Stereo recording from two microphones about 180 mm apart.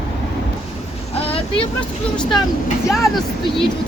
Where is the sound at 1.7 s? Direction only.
5° left (ahead or behind).